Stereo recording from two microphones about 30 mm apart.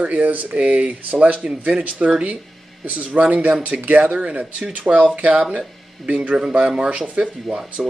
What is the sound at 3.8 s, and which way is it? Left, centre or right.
Speech, right.